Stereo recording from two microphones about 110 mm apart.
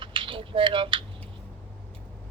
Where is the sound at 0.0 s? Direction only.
50° right (ahead or behind).